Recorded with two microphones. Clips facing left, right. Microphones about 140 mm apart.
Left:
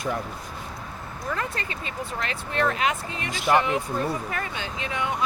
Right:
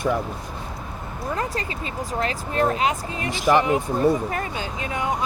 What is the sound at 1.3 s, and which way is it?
Speech, 35° right (ahead or behind).